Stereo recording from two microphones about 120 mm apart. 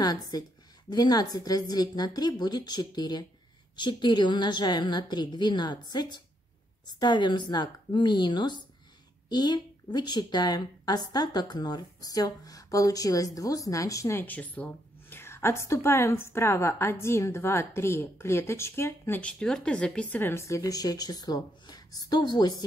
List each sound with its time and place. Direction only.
0.0 s a woman's voice: 35° left (ahead or behind)
14.2 s a woman's voice: 15° left (ahead or behind)
19.4 s a woman's voice: 5° left (ahead or behind); by 22.6 s 35° left (ahead or behind)